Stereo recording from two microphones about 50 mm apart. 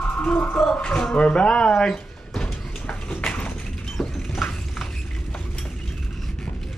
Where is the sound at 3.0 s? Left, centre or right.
Left.